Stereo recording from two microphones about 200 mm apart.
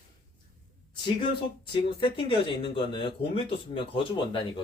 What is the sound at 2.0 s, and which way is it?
Speech, 25° left (ahead or behind).